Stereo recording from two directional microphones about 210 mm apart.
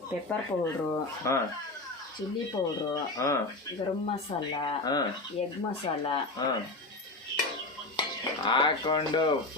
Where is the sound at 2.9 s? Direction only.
15° left (ahead or behind).